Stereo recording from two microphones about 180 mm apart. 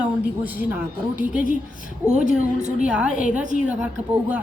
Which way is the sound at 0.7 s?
10° right (ahead or behind).